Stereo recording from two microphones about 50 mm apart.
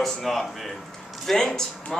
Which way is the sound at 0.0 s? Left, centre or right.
Centre.